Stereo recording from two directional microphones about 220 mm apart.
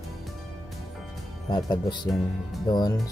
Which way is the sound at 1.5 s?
20° left (ahead or behind).